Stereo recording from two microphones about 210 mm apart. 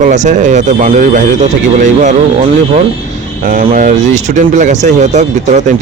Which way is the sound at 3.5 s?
40° right (ahead or behind).